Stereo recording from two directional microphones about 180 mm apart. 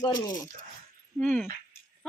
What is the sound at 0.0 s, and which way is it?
Speech, 20° left (ahead or behind).